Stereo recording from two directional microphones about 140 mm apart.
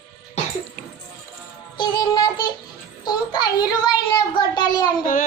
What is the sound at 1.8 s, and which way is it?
Music, 30° left (ahead or behind).